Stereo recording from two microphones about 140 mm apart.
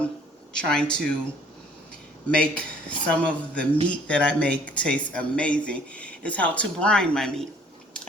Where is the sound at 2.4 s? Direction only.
10° left (ahead or behind).